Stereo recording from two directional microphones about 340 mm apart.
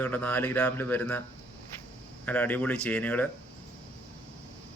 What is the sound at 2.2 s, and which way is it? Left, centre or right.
Speech, centre.